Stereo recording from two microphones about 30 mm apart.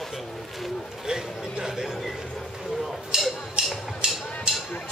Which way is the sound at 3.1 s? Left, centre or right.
Right.